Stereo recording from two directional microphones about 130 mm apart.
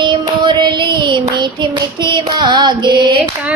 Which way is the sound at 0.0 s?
35° right (ahead or behind).